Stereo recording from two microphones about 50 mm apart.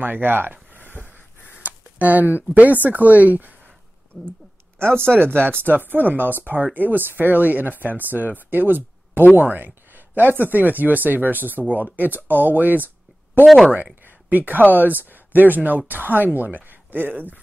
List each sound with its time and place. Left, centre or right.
0.0 s speech: right
1.6 s speech: right
4.1 s a sound: left
5.4 s speech: right